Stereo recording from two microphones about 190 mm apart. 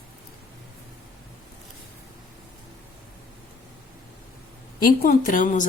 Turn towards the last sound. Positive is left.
turn(degrees=45)  # may be behind; listen again after turning